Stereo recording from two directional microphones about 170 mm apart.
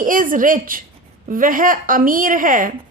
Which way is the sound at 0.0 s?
55° right (ahead or behind).